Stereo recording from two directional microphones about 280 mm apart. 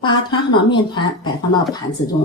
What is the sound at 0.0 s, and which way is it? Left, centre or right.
A woman's voice, centre.